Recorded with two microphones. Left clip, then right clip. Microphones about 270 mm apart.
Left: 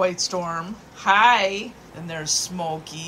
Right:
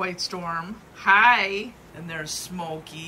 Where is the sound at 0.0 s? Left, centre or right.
Centre.